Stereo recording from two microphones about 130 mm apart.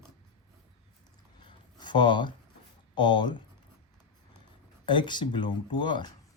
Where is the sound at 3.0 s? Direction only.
35° left (ahead or behind).